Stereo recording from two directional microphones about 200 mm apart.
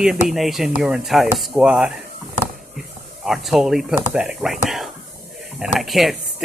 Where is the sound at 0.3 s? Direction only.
Centre (ahead or behind).